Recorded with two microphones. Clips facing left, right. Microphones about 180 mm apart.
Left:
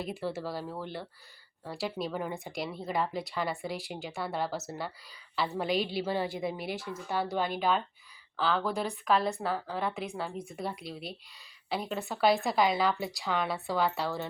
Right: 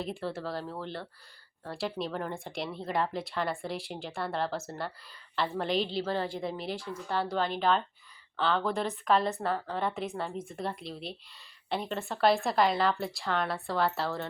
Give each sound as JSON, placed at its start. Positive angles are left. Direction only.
{"t": 0.0, "sound": "a woman's voice", "side_deg": 5}